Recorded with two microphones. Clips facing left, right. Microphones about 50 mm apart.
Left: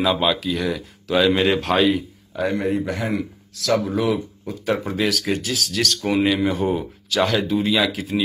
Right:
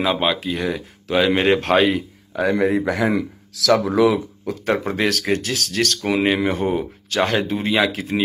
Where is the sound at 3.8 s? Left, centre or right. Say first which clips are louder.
Right 5 dB; right.